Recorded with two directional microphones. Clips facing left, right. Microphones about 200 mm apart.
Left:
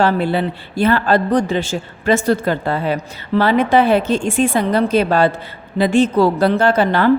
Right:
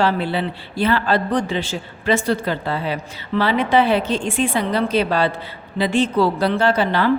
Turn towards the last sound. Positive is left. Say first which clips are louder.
# left 3 dB
turn(degrees=50)  # may be behind; listen again after turning